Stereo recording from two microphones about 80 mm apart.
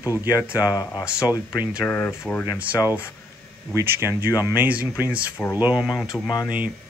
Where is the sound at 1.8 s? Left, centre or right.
Left.